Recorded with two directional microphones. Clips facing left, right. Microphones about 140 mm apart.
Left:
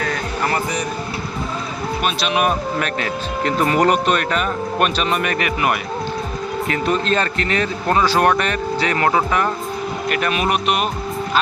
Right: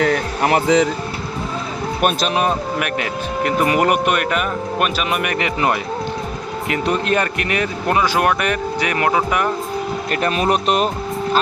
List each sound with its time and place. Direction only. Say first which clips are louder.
0.0 s speech: right 5 dB; 70° right (ahead or behind)
2.0 s speech: right 5 dB; 50° right (ahead or behind)
2.3 s speech: even; 25° right (ahead or behind)
2.7 s speech: even; 15° right (ahead or behind)
6.7 s speech: right 1 dB; 20° right (ahead or behind)
10.1 s speech: right 1 dB; 35° right (ahead or behind)